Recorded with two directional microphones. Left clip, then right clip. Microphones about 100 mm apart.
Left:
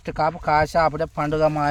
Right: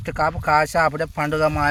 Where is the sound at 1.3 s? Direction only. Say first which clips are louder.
Even; 10° left (ahead or behind).